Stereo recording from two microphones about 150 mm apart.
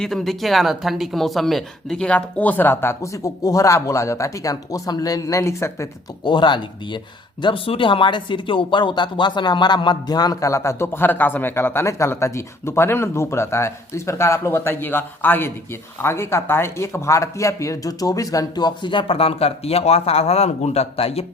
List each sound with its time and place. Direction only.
0.0 s speech: centre (ahead or behind); by 5.9 s 20° left (ahead or behind)
6.2 s a man's voice: 30° left (ahead or behind)